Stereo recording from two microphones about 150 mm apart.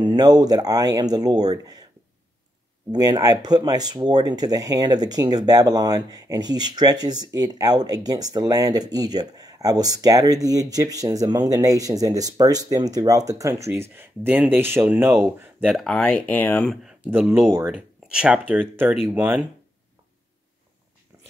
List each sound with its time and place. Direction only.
0.0 s speech: 25° right (ahead or behind)
2.9 s speech: 25° right (ahead or behind)
15.6 s speech: centre (ahead or behind)
16.8 s speech: 10° right (ahead or behind)